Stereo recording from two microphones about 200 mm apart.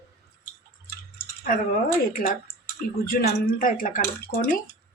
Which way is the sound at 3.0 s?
45° left (ahead or behind).